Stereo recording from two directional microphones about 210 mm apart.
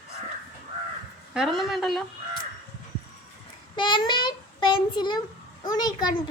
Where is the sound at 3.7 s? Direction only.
20° left (ahead or behind).